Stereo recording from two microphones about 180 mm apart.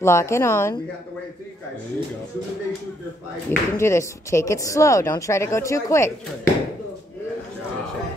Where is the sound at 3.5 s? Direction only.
15° left (ahead or behind).